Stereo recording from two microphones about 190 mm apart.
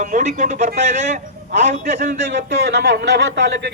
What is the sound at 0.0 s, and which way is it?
A man's voice, 40° right (ahead or behind).